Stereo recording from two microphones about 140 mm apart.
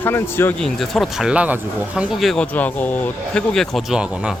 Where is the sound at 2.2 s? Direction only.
5° left (ahead or behind).